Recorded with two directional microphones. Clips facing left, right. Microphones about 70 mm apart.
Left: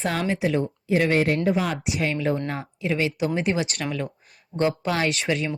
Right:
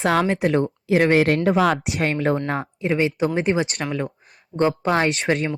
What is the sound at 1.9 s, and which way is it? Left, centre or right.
Speech, right.